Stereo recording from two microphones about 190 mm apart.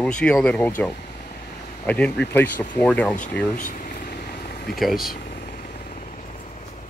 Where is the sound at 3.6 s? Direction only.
45° left (ahead or behind).